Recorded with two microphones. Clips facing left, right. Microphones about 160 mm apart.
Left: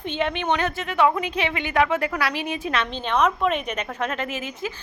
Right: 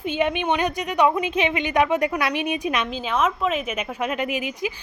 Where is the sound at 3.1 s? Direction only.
5° right (ahead or behind).